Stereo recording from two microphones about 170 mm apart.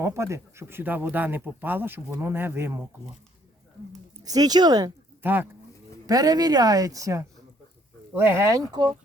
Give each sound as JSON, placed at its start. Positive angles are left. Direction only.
{"t": 0.0, "sound": "speech", "side_deg": -15}
{"t": 4.2, "sound": "speech", "side_deg": -20}
{"t": 5.2, "sound": "speech", "side_deg": -10}